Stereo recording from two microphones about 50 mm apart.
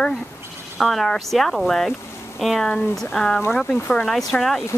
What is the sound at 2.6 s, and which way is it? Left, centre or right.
Speech, centre.